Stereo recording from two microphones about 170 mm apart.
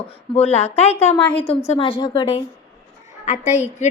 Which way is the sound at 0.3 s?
35° left (ahead or behind).